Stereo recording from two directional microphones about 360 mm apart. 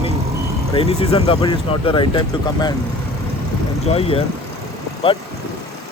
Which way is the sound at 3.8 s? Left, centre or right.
Centre.